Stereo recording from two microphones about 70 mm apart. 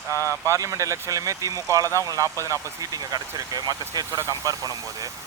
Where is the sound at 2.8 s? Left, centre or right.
Right.